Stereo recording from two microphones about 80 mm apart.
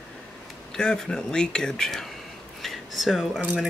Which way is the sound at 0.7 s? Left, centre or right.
Centre.